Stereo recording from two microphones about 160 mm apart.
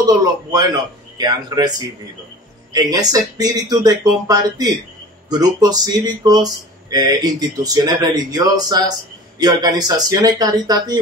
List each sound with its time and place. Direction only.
0.0 s speech: 25° right (ahead or behind)
2.7 s speech: 25° right (ahead or behind)